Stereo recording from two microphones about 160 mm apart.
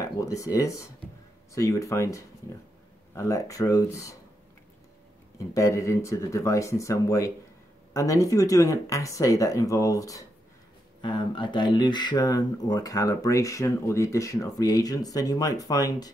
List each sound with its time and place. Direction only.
0.0 s speech: 20° left (ahead or behind)
5.5 s speech: 20° left (ahead or behind)